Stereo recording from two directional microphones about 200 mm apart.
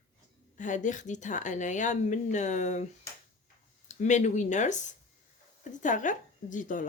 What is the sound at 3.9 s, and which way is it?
Speech, 35° left (ahead or behind).